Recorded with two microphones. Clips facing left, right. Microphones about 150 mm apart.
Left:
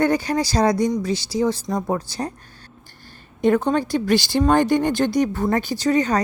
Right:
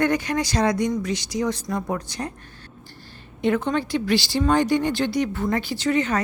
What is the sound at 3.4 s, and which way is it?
A woman's voice, 40° left (ahead or behind).